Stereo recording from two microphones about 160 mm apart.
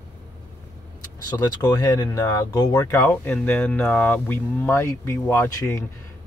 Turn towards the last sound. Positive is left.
turn(degrees=15)  # may be behind; listen again after turning